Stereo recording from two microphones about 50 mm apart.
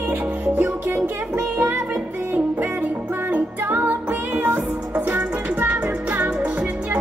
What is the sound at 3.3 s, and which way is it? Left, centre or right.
Music, right.